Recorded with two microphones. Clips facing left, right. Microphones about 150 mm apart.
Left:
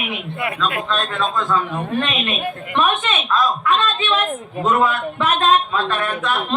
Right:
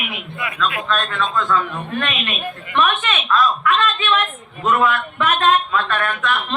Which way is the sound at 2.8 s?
35° left (ahead or behind).